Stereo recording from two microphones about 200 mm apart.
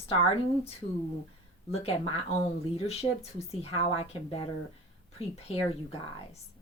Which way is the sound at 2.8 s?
30° left (ahead or behind).